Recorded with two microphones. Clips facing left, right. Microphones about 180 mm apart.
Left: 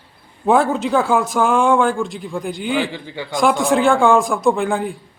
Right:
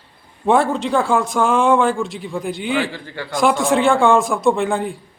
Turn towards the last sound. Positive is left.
turn(degrees=0)  # may be behind; listen again after turning